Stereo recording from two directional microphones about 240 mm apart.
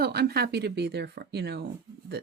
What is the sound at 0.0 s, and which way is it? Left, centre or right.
Speech, right.